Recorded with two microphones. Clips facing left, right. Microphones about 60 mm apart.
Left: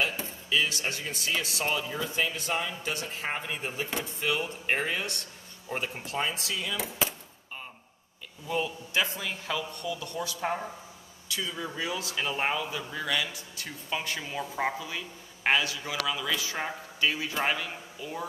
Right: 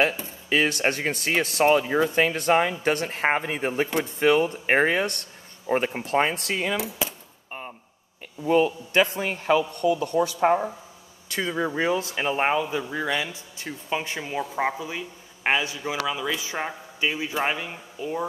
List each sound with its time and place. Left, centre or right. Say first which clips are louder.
0.5 s speech: right 7 dB; right
8.5 s speech: right 11 dB; right
11.2 s a man's voice: right 8 dB; right; by 18.2 s centre